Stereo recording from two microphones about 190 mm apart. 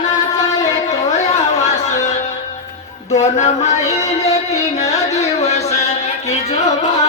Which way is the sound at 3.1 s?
35° left (ahead or behind).